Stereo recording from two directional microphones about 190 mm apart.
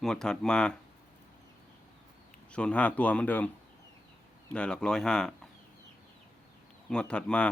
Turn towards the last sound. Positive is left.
turn(degrees=5)  # may be behind; listen again after turning